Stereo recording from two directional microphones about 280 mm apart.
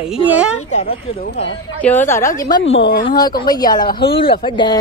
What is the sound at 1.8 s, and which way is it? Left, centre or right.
Speech, centre.